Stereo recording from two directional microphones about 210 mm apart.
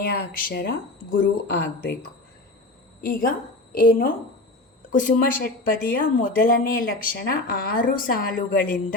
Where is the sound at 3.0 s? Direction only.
45° left (ahead or behind).